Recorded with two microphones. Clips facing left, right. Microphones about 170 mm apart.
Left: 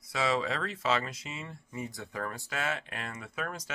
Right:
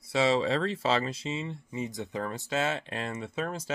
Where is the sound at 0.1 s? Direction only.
30° right (ahead or behind).